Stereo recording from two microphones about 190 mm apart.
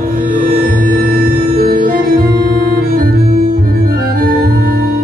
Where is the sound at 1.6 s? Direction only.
50° right (ahead or behind).